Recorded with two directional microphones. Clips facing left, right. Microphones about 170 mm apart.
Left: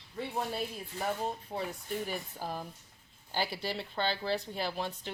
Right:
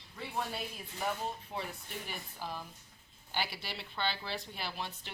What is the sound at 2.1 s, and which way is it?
Speech, 45° left (ahead or behind).